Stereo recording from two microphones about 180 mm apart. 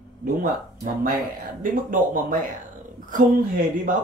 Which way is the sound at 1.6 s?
50° right (ahead or behind).